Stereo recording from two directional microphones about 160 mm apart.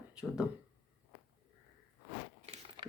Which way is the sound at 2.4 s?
40° right (ahead or behind).